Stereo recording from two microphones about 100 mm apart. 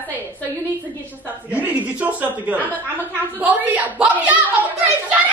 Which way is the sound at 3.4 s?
15° right (ahead or behind).